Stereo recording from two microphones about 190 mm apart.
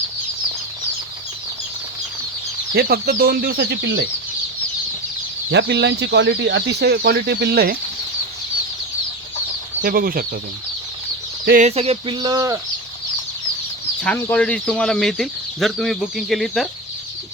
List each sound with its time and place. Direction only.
2.7 s speech: 55° right (ahead or behind)
5.5 s speech: 65° right (ahead or behind)
9.8 s speech: 50° right (ahead or behind)
11.4 s speech: 45° right (ahead or behind)
11.7 s speech: 30° right (ahead or behind)
14.0 s speech: 10° left (ahead or behind)